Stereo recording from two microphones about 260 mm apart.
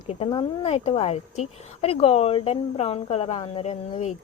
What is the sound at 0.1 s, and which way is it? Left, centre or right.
Speech, left.